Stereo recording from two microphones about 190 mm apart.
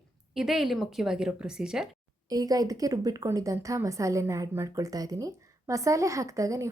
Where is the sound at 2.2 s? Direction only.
20° right (ahead or behind).